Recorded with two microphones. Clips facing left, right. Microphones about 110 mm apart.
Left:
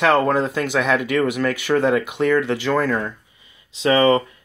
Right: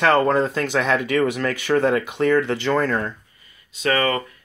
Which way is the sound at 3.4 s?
20° left (ahead or behind).